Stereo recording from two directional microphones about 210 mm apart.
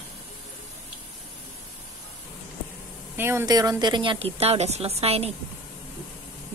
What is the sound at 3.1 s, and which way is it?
A woman's voice, 10° right (ahead or behind).